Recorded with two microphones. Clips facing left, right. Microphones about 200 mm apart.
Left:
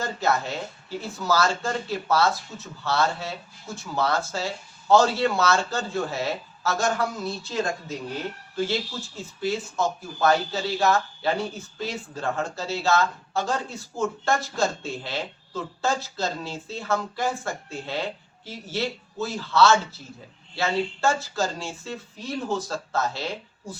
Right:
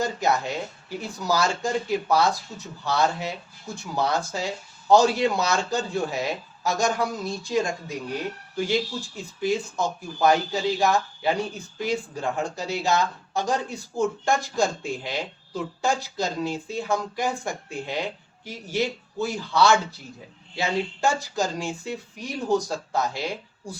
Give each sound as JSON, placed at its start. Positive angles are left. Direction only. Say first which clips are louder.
{"t": 0.0, "sound": "speech", "louder": "right 1 dB", "side_deg": -15}